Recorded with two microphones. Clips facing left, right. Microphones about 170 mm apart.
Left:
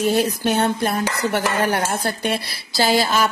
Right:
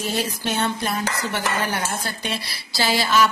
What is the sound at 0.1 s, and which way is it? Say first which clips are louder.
Speech: left 6 dB; 55° left (ahead or behind).